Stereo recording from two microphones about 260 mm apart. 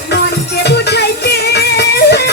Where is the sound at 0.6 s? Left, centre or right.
Left.